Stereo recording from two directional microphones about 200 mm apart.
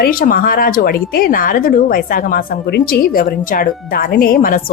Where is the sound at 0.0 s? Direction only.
45° left (ahead or behind).